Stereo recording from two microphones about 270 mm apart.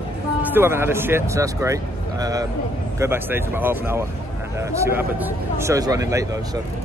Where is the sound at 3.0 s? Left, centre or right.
Centre.